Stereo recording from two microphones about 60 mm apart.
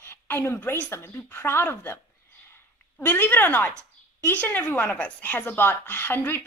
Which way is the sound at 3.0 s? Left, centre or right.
Left.